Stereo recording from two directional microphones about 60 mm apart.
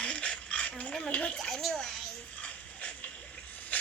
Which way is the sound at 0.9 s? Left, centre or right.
Centre.